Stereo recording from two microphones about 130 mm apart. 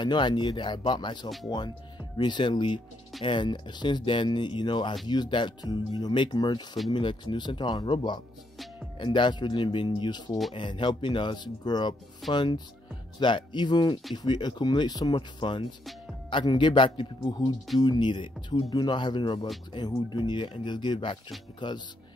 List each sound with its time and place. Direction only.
0.0 s speech: 35° left (ahead or behind)